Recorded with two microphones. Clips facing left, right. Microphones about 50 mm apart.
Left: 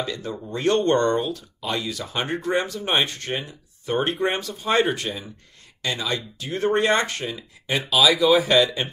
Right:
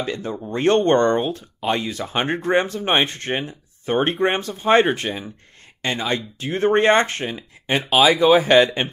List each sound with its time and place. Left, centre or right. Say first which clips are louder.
0.0 s speech: right 3 dB; right